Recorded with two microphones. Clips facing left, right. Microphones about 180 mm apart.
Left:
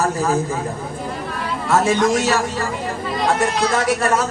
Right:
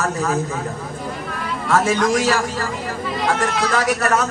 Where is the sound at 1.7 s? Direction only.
25° left (ahead or behind).